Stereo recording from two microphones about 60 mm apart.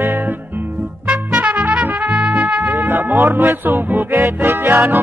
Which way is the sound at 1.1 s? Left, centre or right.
Right.